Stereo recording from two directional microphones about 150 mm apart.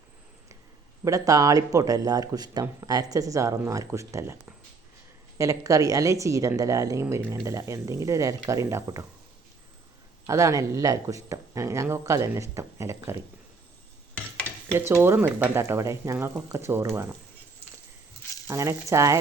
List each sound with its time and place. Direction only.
1.0 s a woman's voice: 25° right (ahead or behind)
10.2 s a woman's voice: 20° right (ahead or behind)
14.7 s speech: 15° right (ahead or behind)
18.4 s a woman's voice: 20° right (ahead or behind)